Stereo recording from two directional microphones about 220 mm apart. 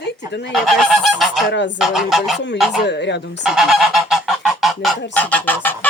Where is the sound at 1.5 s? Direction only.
55° left (ahead or behind).